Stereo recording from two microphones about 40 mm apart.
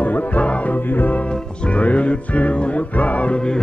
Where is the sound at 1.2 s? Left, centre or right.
Left.